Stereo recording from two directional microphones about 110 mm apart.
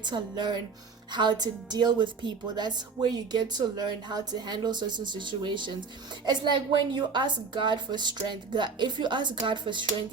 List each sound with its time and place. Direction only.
0.0 s a woman's voice: 45° right (ahead or behind)